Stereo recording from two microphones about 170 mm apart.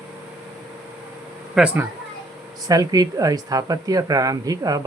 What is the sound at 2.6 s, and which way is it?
Speech, 20° right (ahead or behind).